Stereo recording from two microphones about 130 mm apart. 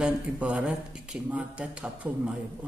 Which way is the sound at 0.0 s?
10° right (ahead or behind).